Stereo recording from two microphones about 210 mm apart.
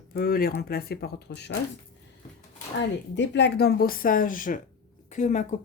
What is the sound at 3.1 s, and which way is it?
A woman's voice, 60° left (ahead or behind).